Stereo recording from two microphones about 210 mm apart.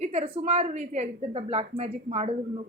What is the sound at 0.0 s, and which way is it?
Speech, 30° right (ahead or behind).